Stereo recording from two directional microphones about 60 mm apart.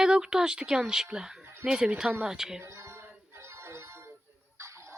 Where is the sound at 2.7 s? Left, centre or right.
Right.